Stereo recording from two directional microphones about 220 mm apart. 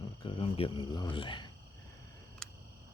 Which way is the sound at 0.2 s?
25° left (ahead or behind).